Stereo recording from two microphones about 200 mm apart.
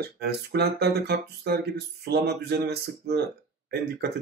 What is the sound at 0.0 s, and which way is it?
Speech, 55° right (ahead or behind).